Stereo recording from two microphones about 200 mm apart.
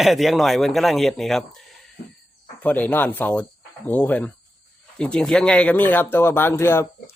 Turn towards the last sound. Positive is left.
turn(degrees=10)  # may be behind; listen again after turning